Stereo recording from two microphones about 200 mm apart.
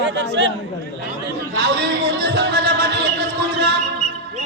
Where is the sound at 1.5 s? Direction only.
60° right (ahead or behind).